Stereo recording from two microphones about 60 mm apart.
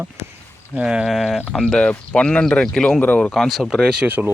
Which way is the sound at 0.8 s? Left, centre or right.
Centre.